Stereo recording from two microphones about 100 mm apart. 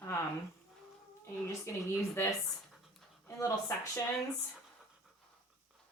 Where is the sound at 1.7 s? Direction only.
25° left (ahead or behind).